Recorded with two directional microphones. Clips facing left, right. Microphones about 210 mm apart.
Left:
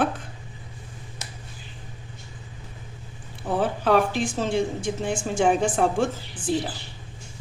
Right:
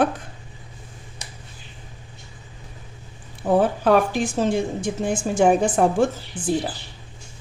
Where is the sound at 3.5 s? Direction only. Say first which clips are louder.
Right 4 dB; 45° right (ahead or behind).